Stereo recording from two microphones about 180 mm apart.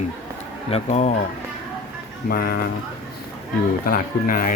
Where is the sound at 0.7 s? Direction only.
40° left (ahead or behind).